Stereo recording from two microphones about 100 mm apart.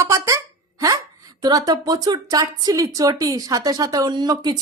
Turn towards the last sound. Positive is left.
turn(degrees=-40)  # may be behind; listen again after turning